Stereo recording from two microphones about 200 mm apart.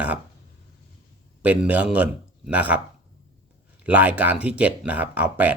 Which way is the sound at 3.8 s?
10° right (ahead or behind).